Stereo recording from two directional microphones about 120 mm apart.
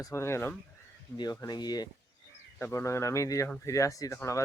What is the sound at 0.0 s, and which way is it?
Speech, 25° left (ahead or behind).